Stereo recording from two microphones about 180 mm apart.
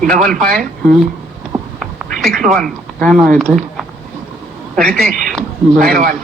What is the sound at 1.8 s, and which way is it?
Speech, centre (ahead or behind).